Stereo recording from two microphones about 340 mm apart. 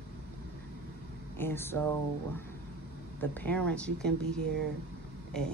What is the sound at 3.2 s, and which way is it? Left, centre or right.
Speech, centre.